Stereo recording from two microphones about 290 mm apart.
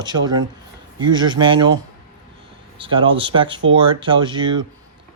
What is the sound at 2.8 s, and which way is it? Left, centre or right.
Speech, centre.